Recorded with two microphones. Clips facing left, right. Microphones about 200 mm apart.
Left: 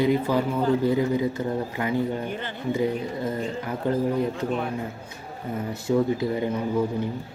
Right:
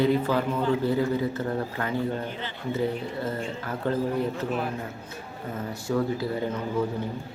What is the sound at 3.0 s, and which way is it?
Speech, 15° left (ahead or behind).